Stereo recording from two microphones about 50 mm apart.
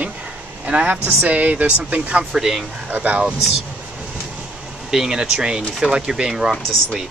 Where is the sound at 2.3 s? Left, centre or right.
Centre.